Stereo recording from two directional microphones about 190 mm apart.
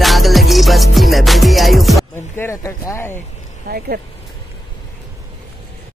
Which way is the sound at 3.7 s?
55° right (ahead or behind).